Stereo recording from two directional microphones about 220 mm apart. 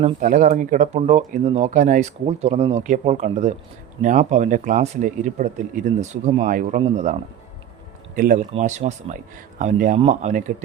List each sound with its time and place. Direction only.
0.0 s speech: 35° right (ahead or behind)